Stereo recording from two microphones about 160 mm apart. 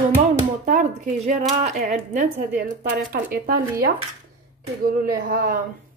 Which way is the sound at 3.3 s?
70° right (ahead or behind).